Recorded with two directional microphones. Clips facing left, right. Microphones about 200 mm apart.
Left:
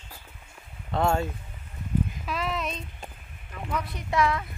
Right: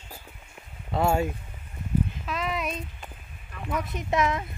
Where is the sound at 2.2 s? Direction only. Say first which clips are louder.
Even; 5° left (ahead or behind).